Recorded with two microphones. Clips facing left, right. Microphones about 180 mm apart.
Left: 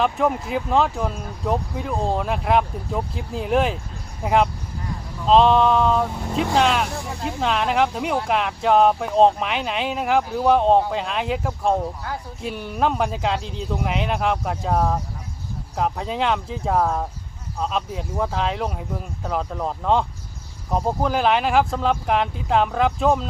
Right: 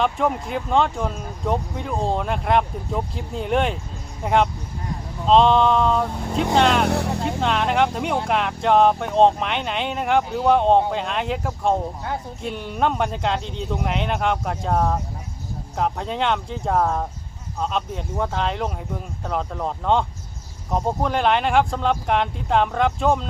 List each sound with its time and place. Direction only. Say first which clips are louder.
0.0 s speech: left 1 dB; centre (ahead or behind)
6.8 s speech: right 8 dB; 70° right (ahead or behind)
7.3 s speech: left 2 dB; centre (ahead or behind)